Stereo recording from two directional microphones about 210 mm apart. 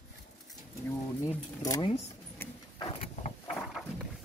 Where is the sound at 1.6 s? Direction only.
15° left (ahead or behind).